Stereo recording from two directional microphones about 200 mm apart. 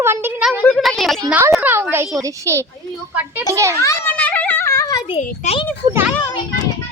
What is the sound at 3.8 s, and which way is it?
Children playing, 15° left (ahead or behind).